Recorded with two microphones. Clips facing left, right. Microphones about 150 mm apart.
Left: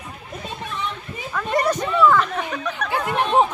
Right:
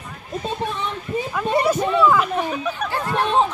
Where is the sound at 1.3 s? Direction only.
10° right (ahead or behind).